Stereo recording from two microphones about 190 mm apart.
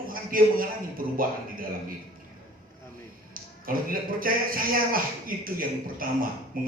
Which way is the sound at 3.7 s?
50° right (ahead or behind).